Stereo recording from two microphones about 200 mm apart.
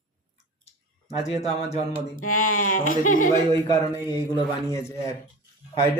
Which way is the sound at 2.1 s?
90° left.